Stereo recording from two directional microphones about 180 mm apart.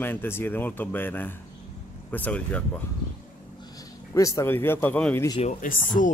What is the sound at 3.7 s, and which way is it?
A man's voice, 20° left (ahead or behind).